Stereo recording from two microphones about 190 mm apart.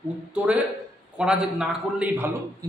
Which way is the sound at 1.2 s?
5° right (ahead or behind).